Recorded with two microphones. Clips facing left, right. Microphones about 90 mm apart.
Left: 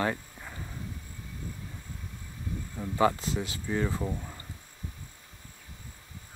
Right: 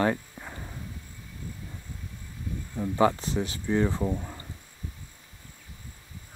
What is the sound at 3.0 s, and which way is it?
Speech, 30° right (ahead or behind).